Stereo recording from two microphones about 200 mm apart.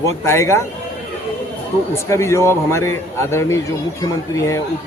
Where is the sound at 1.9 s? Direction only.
15° left (ahead or behind).